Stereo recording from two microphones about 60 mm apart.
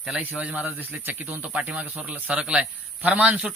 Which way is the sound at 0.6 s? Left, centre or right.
Right.